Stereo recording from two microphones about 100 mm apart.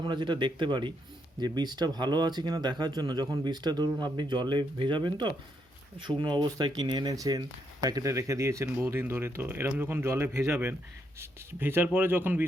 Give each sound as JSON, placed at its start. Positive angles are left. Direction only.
{"t": 0.0, "sound": "speech", "side_deg": -50}